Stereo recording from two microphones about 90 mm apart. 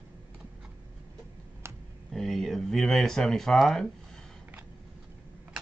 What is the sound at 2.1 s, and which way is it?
Speech, 5° left (ahead or behind).